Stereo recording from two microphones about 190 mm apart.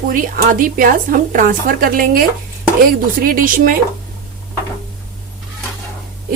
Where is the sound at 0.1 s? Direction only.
45° right (ahead or behind).